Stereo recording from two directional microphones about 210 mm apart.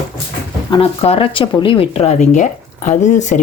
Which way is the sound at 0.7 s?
25° left (ahead or behind).